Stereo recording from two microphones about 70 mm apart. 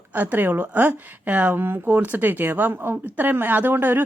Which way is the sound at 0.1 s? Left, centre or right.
Right.